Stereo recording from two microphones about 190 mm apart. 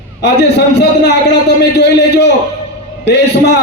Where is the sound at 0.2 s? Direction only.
65° left (ahead or behind).